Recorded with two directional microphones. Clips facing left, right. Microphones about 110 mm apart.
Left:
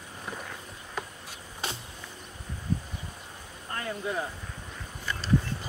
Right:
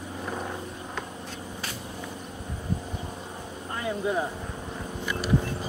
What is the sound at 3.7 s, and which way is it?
Speech, 15° right (ahead or behind).